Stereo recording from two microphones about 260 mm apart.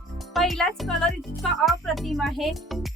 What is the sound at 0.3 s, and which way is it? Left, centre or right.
Speech, centre.